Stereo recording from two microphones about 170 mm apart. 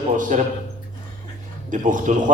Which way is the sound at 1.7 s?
50° right (ahead or behind).